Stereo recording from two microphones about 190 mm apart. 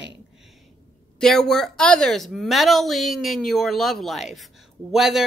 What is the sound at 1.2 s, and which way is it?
Speech, 5° left (ahead or behind).